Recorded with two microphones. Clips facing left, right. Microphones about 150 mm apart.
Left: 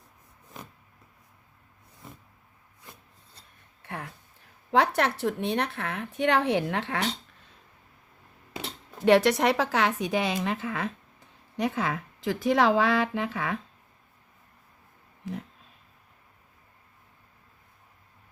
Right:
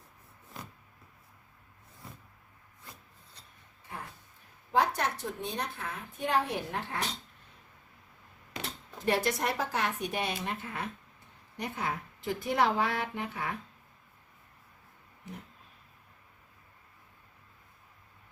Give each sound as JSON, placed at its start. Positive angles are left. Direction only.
{"t": 4.7, "sound": "speech", "side_deg": 75}
{"t": 9.0, "sound": "speech", "side_deg": 85}